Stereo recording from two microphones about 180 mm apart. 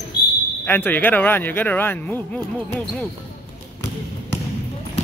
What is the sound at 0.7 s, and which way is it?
Speech, 10° left (ahead or behind).